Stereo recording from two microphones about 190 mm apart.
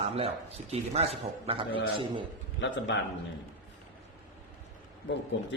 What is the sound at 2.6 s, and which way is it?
Speech, 70° left (ahead or behind).